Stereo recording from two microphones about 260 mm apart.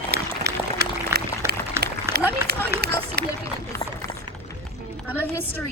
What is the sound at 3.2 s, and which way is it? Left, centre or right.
Speech, right.